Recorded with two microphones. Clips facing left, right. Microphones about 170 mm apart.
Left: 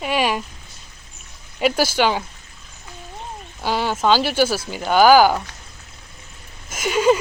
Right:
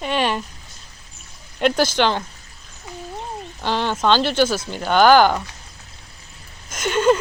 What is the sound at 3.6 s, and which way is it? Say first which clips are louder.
Speech: even; 10° left (ahead or behind).